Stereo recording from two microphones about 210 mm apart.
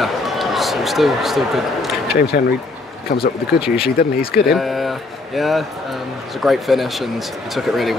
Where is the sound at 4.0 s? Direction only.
45° left (ahead or behind).